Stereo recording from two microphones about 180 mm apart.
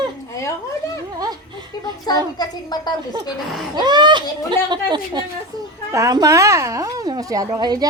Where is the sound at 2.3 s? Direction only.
20° left (ahead or behind).